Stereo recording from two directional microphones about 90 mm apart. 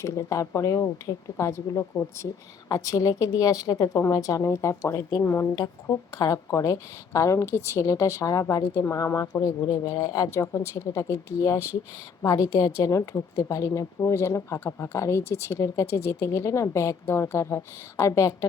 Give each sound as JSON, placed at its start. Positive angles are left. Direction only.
{"t": 0.0, "sound": "speech", "side_deg": 35}
{"t": 2.6, "sound": "speech", "side_deg": 40}
{"t": 5.5, "sound": "a woman's voice", "side_deg": 45}